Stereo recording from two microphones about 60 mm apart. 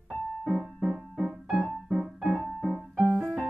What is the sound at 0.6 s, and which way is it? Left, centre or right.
Music, centre.